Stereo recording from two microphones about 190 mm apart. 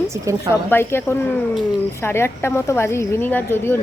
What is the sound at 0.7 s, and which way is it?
A woman's voice, 10° left (ahead or behind).